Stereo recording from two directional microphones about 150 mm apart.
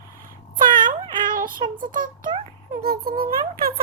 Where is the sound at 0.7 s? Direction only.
65° right (ahead or behind).